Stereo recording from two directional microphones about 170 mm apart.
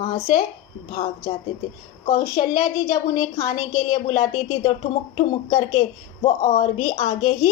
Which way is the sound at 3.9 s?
30° left (ahead or behind).